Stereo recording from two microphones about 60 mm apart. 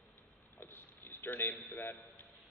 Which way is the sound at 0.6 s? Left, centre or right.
Left.